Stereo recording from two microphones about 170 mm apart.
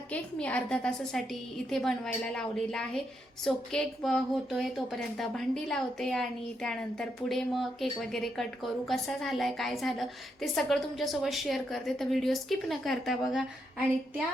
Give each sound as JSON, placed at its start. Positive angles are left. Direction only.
{"t": 0.1, "sound": "a woman's voice", "side_deg": 5}